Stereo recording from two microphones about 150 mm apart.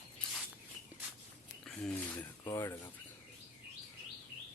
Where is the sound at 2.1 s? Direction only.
25° left (ahead or behind).